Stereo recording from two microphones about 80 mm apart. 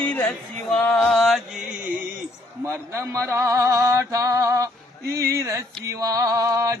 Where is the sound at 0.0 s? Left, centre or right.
Left.